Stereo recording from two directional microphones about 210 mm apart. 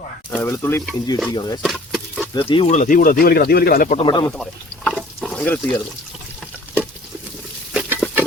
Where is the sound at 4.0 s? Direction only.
25° left (ahead or behind).